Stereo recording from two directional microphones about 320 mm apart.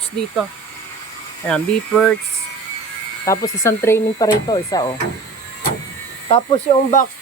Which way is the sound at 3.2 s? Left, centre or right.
Centre.